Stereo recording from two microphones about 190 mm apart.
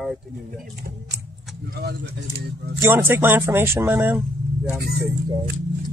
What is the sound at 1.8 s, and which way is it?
Speech, 60° right (ahead or behind).